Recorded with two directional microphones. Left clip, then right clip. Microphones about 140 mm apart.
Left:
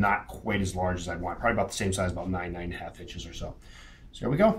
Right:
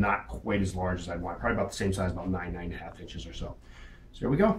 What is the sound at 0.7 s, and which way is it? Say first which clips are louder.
Speech: left 3 dB; 45° left (ahead or behind).